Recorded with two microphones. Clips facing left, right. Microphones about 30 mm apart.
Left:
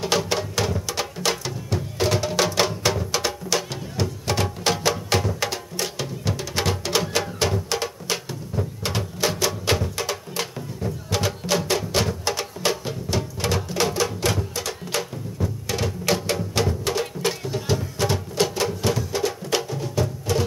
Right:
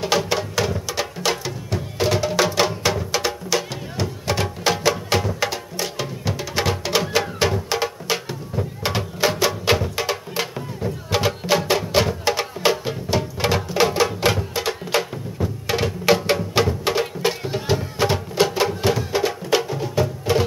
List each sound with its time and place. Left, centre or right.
0.0 s music: centre